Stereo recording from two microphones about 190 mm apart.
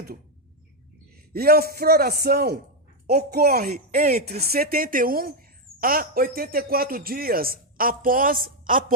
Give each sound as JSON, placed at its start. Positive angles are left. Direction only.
{"t": 1.3, "sound": "speech", "side_deg": -55}